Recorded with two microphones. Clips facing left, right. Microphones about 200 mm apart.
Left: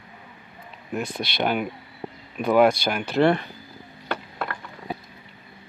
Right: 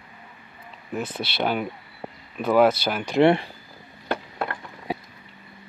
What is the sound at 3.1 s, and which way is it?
Speech, 25° right (ahead or behind).